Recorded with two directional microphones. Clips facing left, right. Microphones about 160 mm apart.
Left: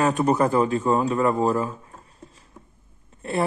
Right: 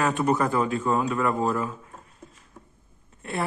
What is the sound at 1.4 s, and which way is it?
Speech, 35° left (ahead or behind).